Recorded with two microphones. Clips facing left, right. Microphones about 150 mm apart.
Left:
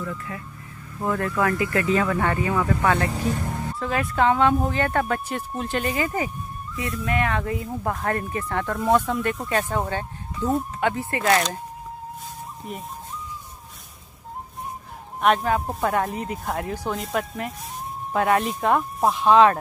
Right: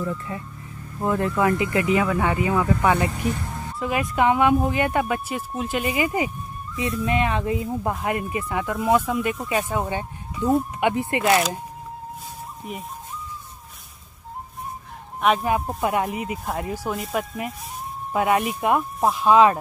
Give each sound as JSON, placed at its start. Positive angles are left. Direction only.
{"t": 0.3, "sound": "speech", "side_deg": -25}
{"t": 12.7, "sound": "speech", "side_deg": -5}
{"t": 15.1, "sound": "speech", "side_deg": 0}
{"t": 15.9, "sound": "speech", "side_deg": -10}